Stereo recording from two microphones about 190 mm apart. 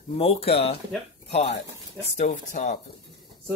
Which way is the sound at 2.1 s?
40° left (ahead or behind).